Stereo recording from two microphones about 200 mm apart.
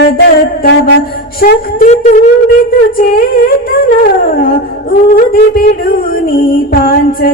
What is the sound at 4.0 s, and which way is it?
Music, 45° left (ahead or behind).